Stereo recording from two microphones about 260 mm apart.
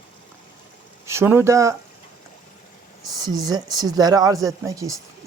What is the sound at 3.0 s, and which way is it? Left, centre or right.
Speech, centre.